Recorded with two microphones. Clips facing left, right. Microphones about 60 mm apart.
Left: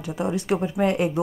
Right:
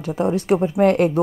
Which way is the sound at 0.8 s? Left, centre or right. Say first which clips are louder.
Right 7 dB; right.